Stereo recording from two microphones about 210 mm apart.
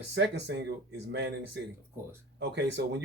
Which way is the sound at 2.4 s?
55° right (ahead or behind).